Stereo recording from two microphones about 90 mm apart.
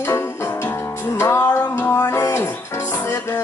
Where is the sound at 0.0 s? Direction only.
30° left (ahead or behind).